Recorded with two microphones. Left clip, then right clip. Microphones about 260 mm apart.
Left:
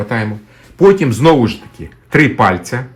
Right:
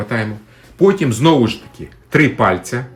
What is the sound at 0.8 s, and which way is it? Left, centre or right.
Speech, centre.